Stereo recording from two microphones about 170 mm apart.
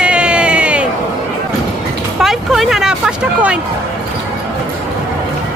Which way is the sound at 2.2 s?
Centre (ahead or behind).